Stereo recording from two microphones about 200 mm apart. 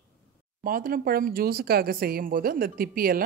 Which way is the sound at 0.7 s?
45° right (ahead or behind).